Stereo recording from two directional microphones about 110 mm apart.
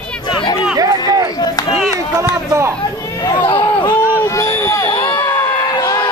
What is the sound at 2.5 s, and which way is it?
Speech, 25° right (ahead or behind).